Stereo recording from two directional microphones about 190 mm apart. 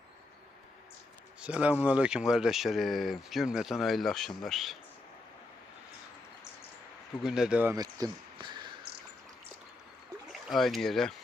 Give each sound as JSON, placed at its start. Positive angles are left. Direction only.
{"t": 1.4, "sound": "speech", "side_deg": -5}
{"t": 7.2, "sound": "speech", "side_deg": -5}
{"t": 7.8, "sound": "speech", "side_deg": -20}
{"t": 10.5, "sound": "speech", "side_deg": 0}